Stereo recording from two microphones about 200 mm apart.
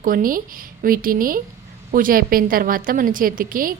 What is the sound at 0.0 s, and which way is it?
A woman's voice, 45° right (ahead or behind).